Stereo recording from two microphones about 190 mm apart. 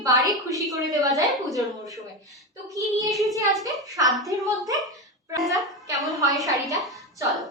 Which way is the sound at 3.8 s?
15° right (ahead or behind).